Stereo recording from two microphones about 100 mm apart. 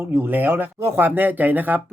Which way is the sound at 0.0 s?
20° right (ahead or behind).